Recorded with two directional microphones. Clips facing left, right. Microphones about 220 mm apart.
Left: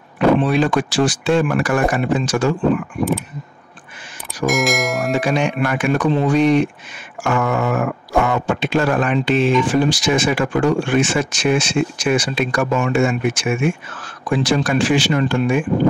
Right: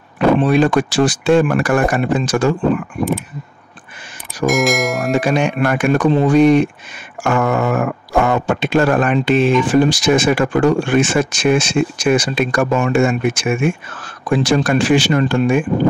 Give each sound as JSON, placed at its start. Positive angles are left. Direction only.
{"t": 0.4, "sound": "speech", "side_deg": -45}
{"t": 4.5, "sound": "speech", "side_deg": 0}
{"t": 5.1, "sound": "speech", "side_deg": -50}